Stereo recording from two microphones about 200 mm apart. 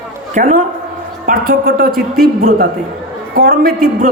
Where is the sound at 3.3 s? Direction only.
50° right (ahead or behind).